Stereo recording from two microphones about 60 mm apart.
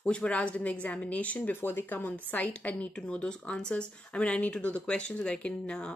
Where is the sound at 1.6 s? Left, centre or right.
Left.